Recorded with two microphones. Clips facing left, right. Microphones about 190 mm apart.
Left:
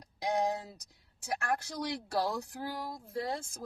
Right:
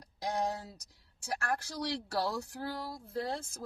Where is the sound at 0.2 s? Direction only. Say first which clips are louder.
Left 3 dB; 15° left (ahead or behind).